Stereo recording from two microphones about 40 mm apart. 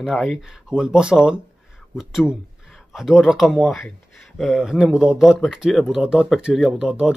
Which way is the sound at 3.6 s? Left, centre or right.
Centre.